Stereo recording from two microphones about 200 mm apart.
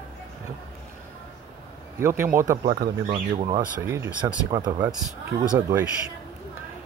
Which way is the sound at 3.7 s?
15° right (ahead or behind).